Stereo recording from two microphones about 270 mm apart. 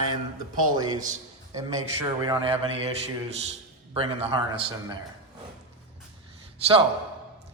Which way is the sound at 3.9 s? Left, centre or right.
Right.